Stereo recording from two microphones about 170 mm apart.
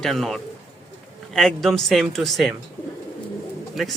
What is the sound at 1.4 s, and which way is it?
A man's voice, centre (ahead or behind).